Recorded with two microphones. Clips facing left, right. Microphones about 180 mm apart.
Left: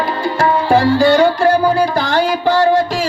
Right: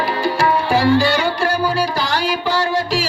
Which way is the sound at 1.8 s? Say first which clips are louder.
Left 5 dB; 55° left (ahead or behind).